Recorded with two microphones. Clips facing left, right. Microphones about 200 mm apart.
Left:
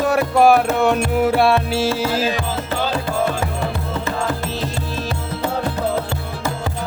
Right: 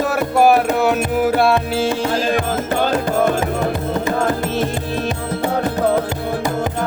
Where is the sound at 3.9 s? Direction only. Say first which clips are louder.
Right 4 dB; 45° right (ahead or behind).